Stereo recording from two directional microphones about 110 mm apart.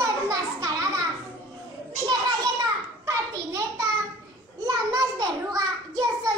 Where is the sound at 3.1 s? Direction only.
30° right (ahead or behind).